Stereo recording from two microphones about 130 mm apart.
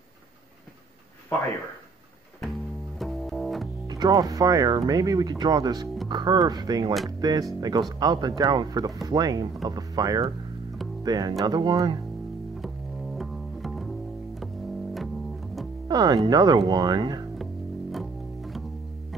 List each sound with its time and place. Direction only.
3.0 s double bass: centre (ahead or behind)
3.8 s speech: 30° right (ahead or behind)
12.5 s double bass: centre (ahead or behind)
15.9 s speech: 30° right (ahead or behind)
17.9 s music: centre (ahead or behind)